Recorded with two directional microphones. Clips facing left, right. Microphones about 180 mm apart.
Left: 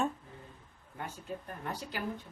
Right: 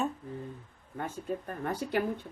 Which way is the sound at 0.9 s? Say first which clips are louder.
Right 6 dB; 55° right (ahead or behind).